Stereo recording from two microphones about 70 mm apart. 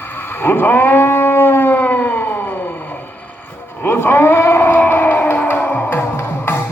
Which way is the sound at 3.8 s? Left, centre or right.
Left.